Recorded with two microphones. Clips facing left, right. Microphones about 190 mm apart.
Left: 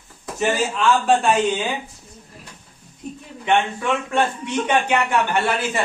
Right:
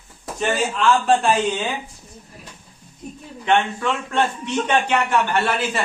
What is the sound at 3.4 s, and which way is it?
A man's voice, 10° left (ahead or behind).